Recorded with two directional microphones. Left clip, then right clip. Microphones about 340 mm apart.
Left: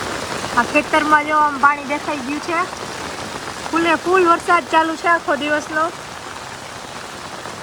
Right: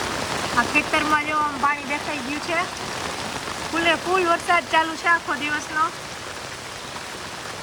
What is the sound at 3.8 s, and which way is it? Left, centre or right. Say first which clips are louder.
Speech: left 5 dB; centre.